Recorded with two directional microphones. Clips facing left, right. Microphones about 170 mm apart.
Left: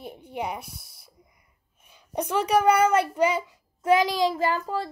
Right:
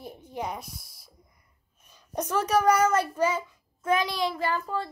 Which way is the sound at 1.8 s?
10° left (ahead or behind).